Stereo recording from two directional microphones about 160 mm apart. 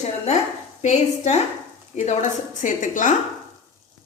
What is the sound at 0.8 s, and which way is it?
A woman's voice, 45° left (ahead or behind).